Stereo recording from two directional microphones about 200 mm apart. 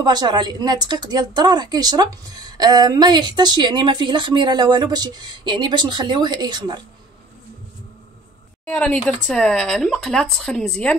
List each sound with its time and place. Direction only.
0.0 s speech: 20° right (ahead or behind)
8.6 s speech: 5° left (ahead or behind)